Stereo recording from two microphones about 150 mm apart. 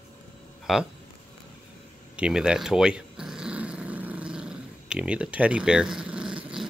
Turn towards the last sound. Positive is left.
turn(degrees=-5)  # may be behind; listen again after turning